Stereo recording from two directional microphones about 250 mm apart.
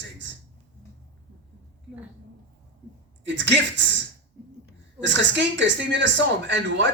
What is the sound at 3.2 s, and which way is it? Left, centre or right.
Speech, right.